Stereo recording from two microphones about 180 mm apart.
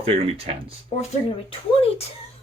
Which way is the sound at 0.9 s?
40° left (ahead or behind).